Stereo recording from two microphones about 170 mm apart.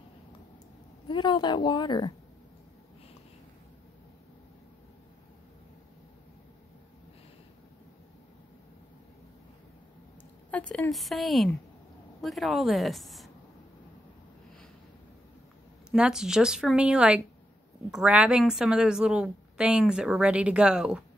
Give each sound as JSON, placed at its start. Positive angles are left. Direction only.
{"t": 1.0, "sound": "a woman's voice", "side_deg": 25}
{"t": 10.5, "sound": "a woman's voice", "side_deg": 5}
{"t": 15.9, "sound": "a woman's voice", "side_deg": -5}